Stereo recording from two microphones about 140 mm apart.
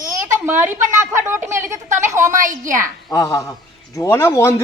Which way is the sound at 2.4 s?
70° right (ahead or behind).